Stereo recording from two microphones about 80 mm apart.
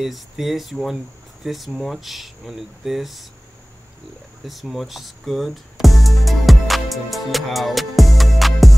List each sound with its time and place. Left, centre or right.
0.0 s speech: centre
4.5 s speech: centre